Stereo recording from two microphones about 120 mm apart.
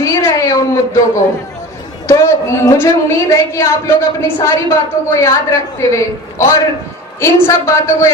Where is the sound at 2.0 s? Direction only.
25° left (ahead or behind).